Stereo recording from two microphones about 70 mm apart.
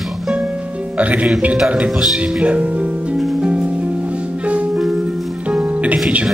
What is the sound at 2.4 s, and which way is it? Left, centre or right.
Music, centre.